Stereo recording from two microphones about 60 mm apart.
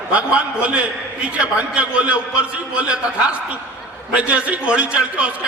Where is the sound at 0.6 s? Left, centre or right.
Centre.